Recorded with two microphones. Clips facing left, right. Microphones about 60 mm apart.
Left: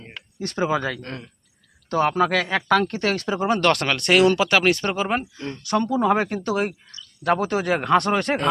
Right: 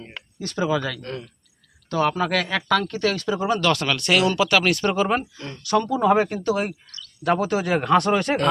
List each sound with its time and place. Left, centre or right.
0.5 s speech: left
3.8 s speech: left
7.7 s speech: left
7.9 s speech: left